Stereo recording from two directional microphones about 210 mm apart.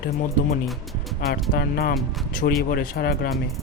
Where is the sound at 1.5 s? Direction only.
45° left (ahead or behind).